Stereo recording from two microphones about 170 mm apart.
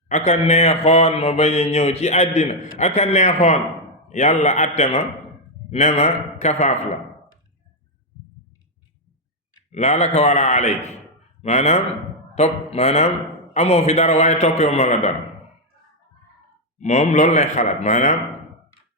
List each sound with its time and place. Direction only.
0.1 s speech: 40° left (ahead or behind)
9.7 s speech: 40° left (ahead or behind)
16.7 s speech: 45° left (ahead or behind)